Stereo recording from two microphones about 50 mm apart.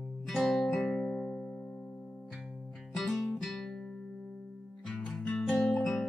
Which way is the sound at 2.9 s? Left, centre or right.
Centre.